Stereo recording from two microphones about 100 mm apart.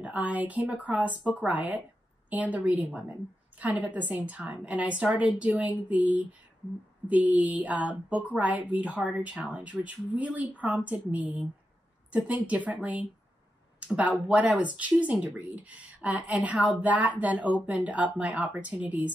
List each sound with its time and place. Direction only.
0.0 s a woman's voice: 15° right (ahead or behind)